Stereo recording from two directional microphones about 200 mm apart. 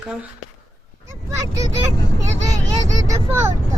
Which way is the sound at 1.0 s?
15° right (ahead or behind).